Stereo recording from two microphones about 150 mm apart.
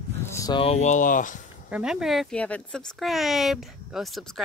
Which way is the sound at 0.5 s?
45° left (ahead or behind).